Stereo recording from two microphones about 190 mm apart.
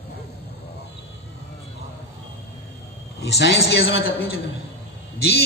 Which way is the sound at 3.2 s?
60° left (ahead or behind).